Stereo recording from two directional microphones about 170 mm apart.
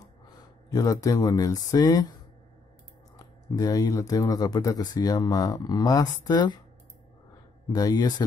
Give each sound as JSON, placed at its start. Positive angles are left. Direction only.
{"t": 0.7, "sound": "speech", "side_deg": 20}
{"t": 3.2, "sound": "speech", "side_deg": 20}
{"t": 7.7, "sound": "speech", "side_deg": 20}